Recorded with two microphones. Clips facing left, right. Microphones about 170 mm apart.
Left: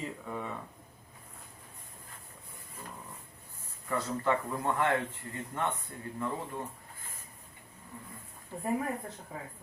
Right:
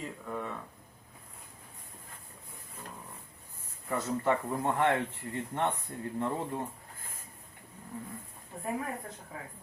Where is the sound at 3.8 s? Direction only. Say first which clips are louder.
Right 1 dB; 25° right (ahead or behind).